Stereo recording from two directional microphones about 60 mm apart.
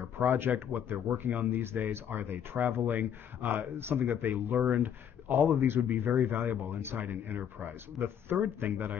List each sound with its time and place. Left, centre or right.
0.2 s speech: right